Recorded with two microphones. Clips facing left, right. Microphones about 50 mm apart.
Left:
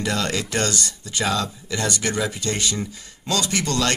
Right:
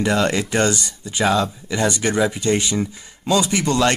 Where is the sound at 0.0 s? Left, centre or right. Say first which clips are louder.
Right 5 dB; right.